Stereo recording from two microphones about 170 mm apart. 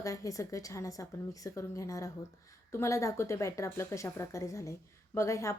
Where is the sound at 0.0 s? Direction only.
20° left (ahead or behind).